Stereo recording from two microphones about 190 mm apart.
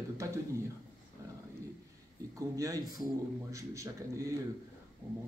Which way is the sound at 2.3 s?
15° right (ahead or behind).